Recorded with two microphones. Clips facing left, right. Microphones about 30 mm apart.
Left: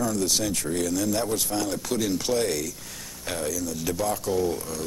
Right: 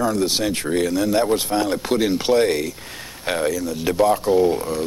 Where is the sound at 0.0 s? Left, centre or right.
Right.